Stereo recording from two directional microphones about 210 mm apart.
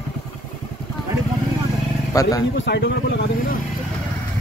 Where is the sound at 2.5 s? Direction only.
55° left (ahead or behind).